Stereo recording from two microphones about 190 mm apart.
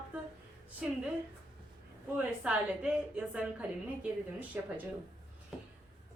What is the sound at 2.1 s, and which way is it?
Speech, 5° right (ahead or behind).